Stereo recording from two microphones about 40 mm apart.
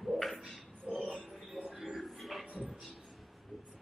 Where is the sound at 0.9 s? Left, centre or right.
Right.